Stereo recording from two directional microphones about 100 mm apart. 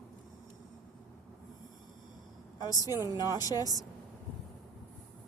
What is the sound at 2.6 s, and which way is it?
A woman's voice, 40° left (ahead or behind).